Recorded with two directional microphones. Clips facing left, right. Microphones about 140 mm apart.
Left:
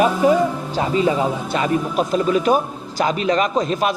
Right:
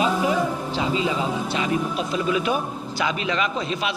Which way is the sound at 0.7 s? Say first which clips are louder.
Left 6 dB; 45° left (ahead or behind).